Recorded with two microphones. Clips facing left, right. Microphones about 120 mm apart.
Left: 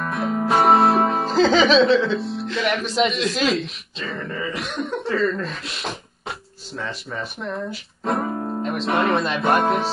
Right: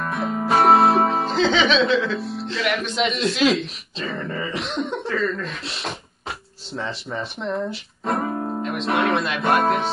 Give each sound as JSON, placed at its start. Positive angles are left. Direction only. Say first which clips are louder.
{"t": 0.0, "sound": "music", "louder": "left 1 dB", "side_deg": 0}
{"t": 1.6, "sound": "speech", "louder": "left 3 dB", "side_deg": 0}
{"t": 4.6, "sound": "speech", "louder": "right 1 dB", "side_deg": -25}
{"t": 4.9, "sound": "speech", "louder": "left 6 dB", "side_deg": 0}
{"t": 6.8, "sound": "speech", "louder": "right 1 dB", "side_deg": -30}
{"t": 7.2, "sound": "speech", "louder": "right 3 dB", "side_deg": 0}